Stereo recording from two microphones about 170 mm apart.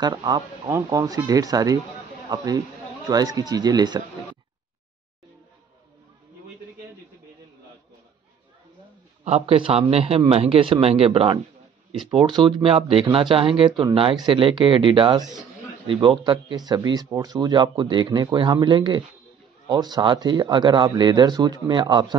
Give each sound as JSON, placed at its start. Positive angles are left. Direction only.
{"t": 0.0, "sound": "speech", "side_deg": -25}
{"t": 9.2, "sound": "a man's voice", "side_deg": -35}